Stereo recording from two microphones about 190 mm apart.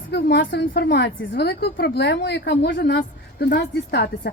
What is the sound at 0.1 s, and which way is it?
A woman's voice, 65° left (ahead or behind).